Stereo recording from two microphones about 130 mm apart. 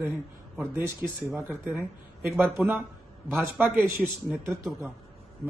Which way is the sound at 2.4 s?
15° right (ahead or behind).